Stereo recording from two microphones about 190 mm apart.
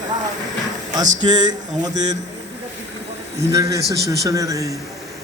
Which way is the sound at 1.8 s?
20° right (ahead or behind).